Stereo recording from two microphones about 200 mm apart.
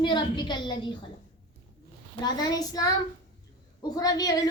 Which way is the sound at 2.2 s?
20° left (ahead or behind).